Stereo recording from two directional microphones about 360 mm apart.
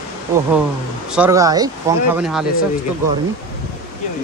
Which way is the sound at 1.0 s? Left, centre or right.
Centre.